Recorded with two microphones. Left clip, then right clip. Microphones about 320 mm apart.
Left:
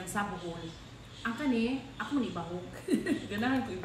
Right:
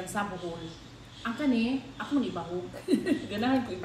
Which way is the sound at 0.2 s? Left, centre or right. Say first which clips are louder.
Right 1 dB; centre.